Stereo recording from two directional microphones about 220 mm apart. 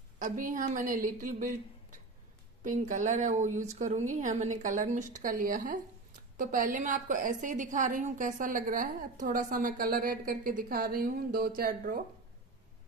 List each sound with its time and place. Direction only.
0.2 s a woman's voice: 40° right (ahead or behind)